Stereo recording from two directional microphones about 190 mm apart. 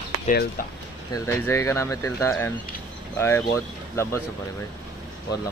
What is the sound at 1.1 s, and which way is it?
Speech, 15° left (ahead or behind).